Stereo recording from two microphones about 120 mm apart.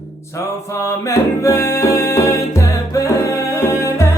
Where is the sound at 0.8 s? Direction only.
25° left (ahead or behind).